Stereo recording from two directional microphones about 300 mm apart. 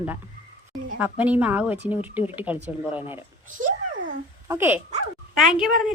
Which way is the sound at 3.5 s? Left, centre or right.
Right.